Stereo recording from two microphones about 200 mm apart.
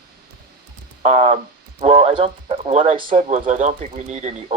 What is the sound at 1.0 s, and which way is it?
Speech, 35° right (ahead or behind).